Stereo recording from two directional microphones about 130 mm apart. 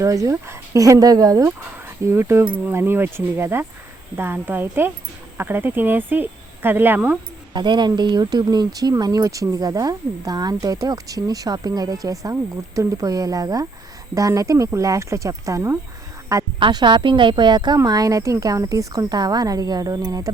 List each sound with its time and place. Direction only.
0.0 s speech: 25° right (ahead or behind)
7.5 s speech: 35° right (ahead or behind)
16.6 s speech: 40° right (ahead or behind)